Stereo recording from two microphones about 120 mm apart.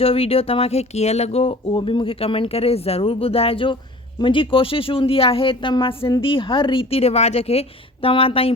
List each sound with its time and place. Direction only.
0.0 s speech: 55° left (ahead or behind)